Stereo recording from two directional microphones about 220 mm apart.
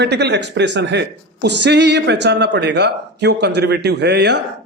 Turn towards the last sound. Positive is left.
turn(degrees=-50)  # may be behind; listen again after turning